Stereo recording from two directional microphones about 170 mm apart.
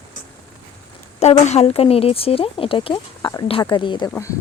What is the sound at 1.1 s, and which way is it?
Speech, 40° left (ahead or behind).